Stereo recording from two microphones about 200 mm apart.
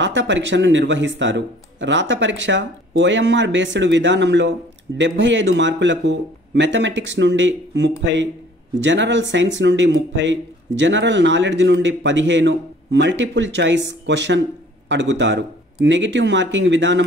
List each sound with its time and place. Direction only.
0.0 s speech: 65° right (ahead or behind)